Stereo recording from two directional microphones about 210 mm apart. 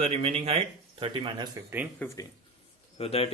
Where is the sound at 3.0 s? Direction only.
30° left (ahead or behind).